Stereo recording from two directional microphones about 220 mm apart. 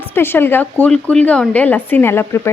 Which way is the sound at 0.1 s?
10° left (ahead or behind).